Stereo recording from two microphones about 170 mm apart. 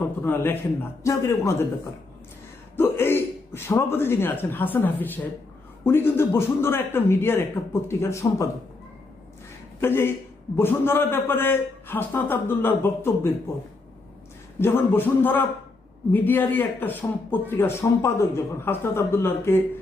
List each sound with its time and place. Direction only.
0.2 s a man's voice: 10° left (ahead or behind)
2.7 s a man's voice: 15° left (ahead or behind)
9.8 s a man's voice: 15° left (ahead or behind)
14.6 s a man's voice: 15° left (ahead or behind)